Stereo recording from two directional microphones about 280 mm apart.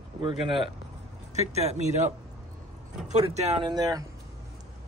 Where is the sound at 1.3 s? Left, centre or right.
Right.